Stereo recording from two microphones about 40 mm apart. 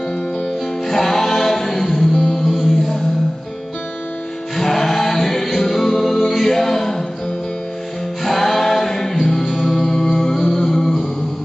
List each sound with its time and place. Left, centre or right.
0.8 s music: centre
2.1 s music: left
2.4 s mantra: centre
4.6 s music: centre
8.2 s music: centre